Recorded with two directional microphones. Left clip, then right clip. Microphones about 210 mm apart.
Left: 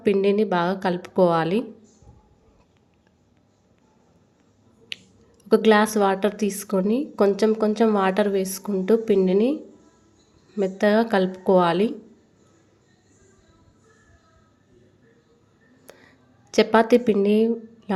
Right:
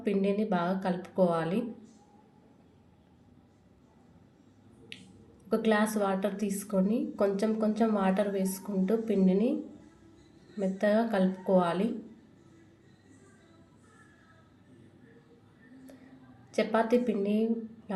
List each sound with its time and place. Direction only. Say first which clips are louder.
0.0 s a woman's voice: left 10 dB; 45° left (ahead or behind)
5.5 s a woman's voice: left 11 dB; 45° left (ahead or behind)
10.6 s a woman's voice: left 8 dB; 45° left (ahead or behind)
16.5 s a woman's voice: left 10 dB; 45° left (ahead or behind)